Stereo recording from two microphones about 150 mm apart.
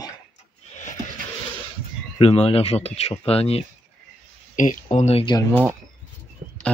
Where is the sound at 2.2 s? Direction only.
40° left (ahead or behind).